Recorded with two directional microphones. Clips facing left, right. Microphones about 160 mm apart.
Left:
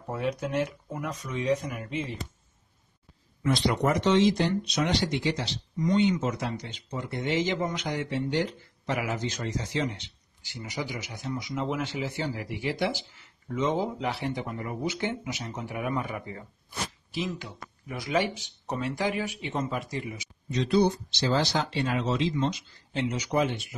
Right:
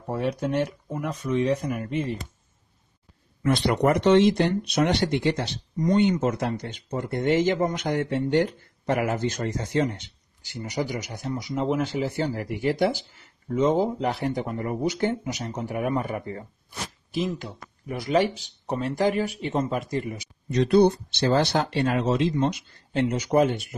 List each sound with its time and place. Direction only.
0.1 s speech: 35° right (ahead or behind)
1.6 s speech: 45° right (ahead or behind)
3.4 s speech: 60° right (ahead or behind); by 16.4 s 40° right (ahead or behind)
17.8 s speech: 45° right (ahead or behind)